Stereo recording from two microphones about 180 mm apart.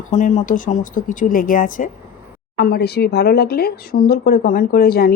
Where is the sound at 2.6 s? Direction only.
60° left (ahead or behind).